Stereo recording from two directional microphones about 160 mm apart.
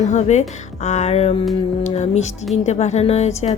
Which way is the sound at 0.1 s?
45° left (ahead or behind).